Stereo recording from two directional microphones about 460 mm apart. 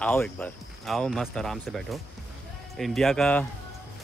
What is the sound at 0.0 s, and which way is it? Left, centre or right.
Speech, centre.